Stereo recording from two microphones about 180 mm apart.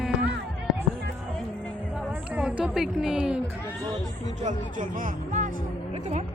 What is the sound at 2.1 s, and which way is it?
Speech, 5° right (ahead or behind).